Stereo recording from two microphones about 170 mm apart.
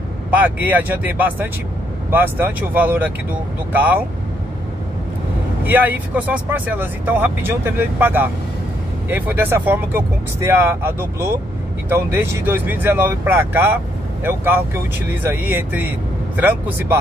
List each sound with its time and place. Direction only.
0.3 s speech: 10° right (ahead or behind)
5.6 s speech: 10° right (ahead or behind)